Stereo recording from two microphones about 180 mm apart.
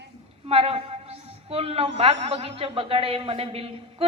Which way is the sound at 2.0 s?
35° right (ahead or behind).